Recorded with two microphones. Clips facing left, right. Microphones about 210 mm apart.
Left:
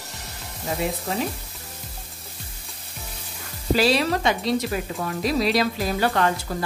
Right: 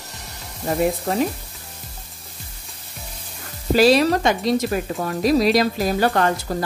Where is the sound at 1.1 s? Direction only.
50° right (ahead or behind).